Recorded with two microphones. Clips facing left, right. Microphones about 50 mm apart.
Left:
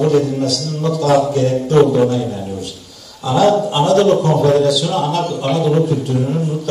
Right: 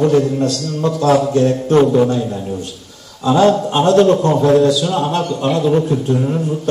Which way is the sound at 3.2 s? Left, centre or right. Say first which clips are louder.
Right 1 dB; right.